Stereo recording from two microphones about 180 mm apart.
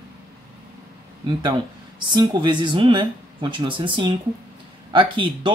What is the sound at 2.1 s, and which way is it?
Speech, 25° right (ahead or behind).